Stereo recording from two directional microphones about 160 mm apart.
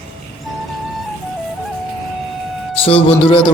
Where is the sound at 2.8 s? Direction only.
40° left (ahead or behind).